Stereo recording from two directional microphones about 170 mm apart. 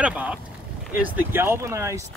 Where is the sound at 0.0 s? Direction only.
5° right (ahead or behind).